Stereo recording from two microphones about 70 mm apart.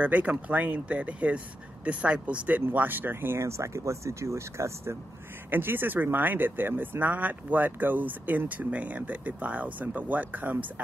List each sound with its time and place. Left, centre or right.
0.0 s speech: right
5.5 s speech: right